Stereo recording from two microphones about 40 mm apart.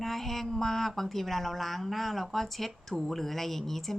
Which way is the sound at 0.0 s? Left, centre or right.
Centre.